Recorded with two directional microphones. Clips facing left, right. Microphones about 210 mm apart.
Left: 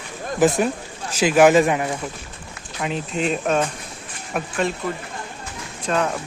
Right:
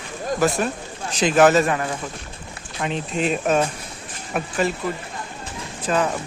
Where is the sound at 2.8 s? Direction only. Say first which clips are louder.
Even; centre (ahead or behind).